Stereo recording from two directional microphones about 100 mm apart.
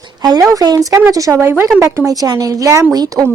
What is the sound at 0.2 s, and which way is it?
Speech, 40° right (ahead or behind).